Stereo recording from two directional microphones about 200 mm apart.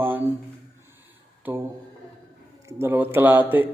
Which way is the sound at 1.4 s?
10° right (ahead or behind).